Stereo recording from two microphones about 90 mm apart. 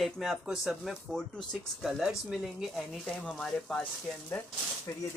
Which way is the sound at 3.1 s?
10° left (ahead or behind).